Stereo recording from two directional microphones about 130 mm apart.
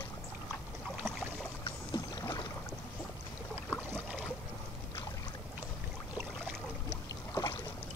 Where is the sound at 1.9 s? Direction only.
30° left (ahead or behind).